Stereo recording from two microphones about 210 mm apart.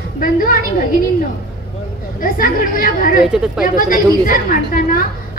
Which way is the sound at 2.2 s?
40° left (ahead or behind).